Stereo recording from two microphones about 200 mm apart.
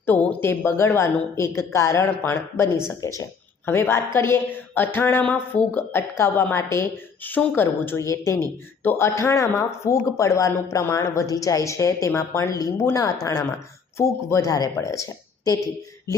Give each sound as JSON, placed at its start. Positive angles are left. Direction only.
{"t": 0.0, "sound": "speech", "side_deg": 10}